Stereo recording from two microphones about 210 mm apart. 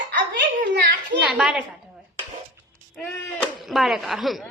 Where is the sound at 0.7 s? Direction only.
50° right (ahead or behind).